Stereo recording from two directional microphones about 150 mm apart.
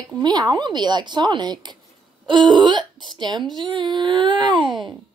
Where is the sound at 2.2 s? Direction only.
30° right (ahead or behind).